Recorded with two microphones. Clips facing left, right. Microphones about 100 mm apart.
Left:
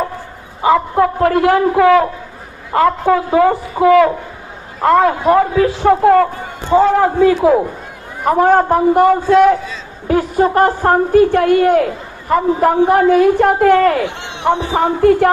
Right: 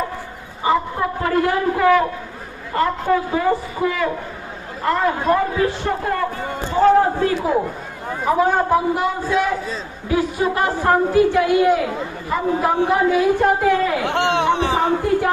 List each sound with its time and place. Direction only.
0.6 s a man's voice: 80° left
8.2 s a man's voice: 60° left (ahead or behind)
10.1 s a woman's voice: 45° left (ahead or behind)
14.1 s speech: 65° right (ahead or behind)
14.7 s speech: 70° left (ahead or behind)